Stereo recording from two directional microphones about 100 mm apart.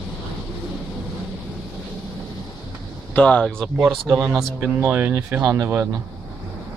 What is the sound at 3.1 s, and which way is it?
Speech, 10° left (ahead or behind).